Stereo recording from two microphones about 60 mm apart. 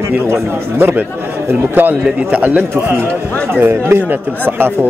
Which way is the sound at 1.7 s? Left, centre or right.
Right.